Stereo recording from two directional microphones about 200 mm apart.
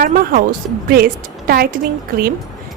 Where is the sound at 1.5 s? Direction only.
50° right (ahead or behind).